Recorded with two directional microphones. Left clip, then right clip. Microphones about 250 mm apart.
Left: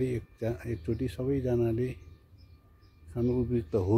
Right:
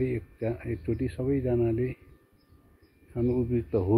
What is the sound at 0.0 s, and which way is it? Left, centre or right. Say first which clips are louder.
Speech: right 2 dB; left.